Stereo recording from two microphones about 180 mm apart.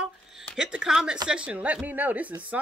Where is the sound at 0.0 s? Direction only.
Centre (ahead or behind).